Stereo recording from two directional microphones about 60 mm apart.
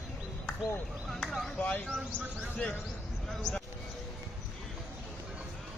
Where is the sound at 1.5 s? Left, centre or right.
Centre.